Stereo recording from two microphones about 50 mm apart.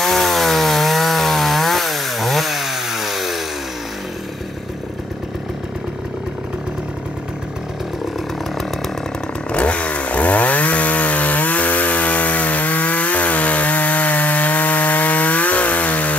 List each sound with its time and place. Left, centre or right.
0.0 s chainsaw: centre
9.5 s chainsaw: left